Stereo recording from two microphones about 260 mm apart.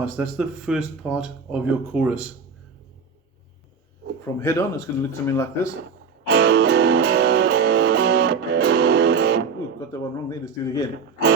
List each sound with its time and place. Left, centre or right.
0.0 s speech: centre
4.4 s speech: centre
6.2 s music: right
9.9 s speech: centre